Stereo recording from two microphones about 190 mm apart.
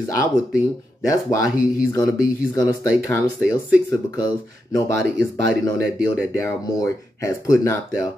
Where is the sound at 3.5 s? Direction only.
20° left (ahead or behind).